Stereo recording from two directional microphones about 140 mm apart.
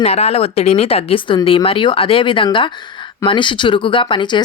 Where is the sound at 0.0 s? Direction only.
50° left (ahead or behind).